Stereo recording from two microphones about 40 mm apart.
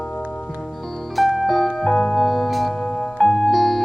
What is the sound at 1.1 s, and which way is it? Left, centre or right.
Music, centre.